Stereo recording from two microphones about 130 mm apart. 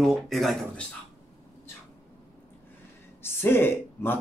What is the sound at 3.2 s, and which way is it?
Speech, 15° left (ahead or behind).